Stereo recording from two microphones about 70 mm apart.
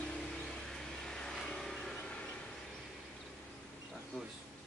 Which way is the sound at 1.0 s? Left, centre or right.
Centre.